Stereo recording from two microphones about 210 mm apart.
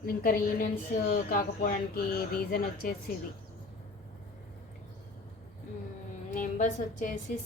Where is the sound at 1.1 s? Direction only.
45° left (ahead or behind).